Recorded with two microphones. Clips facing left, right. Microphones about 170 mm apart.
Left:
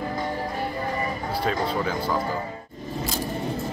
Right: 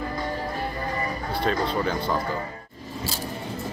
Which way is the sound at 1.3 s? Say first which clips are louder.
Right 1 dB; 5° left (ahead or behind).